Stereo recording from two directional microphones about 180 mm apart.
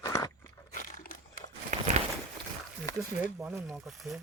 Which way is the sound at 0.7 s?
50° left (ahead or behind).